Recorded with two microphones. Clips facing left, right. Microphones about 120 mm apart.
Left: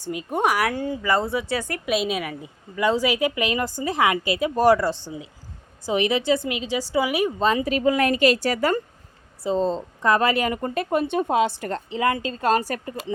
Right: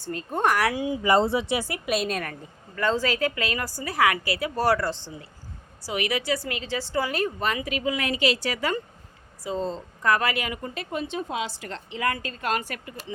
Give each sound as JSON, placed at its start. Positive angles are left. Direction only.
{"t": 0.0, "sound": "a woman's voice", "side_deg": 15}
{"t": 0.7, "sound": "speech", "side_deg": -10}
{"t": 1.0, "sound": "speech", "side_deg": -25}
{"t": 1.5, "sound": "a woman's voice", "side_deg": -10}
{"t": 5.8, "sound": "a woman's voice", "side_deg": 25}
{"t": 7.3, "sound": "a woman's voice", "side_deg": 25}
{"t": 9.4, "sound": "a woman's voice", "side_deg": 25}
{"t": 11.9, "sound": "a woman's voice", "side_deg": 25}